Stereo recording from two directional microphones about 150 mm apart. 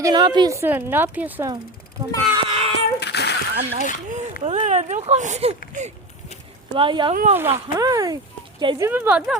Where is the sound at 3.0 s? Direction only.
90° left.